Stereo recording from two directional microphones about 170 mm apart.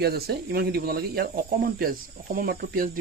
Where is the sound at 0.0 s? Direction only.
70° right (ahead or behind).